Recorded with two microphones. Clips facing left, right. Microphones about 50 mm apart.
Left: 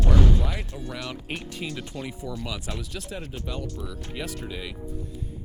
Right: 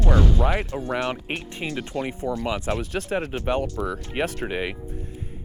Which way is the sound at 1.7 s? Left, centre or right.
Right.